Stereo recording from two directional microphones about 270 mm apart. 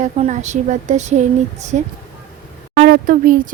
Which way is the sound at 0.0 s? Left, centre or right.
Right.